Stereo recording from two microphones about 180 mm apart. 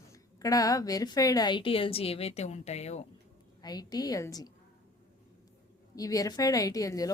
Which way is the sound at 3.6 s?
20° left (ahead or behind).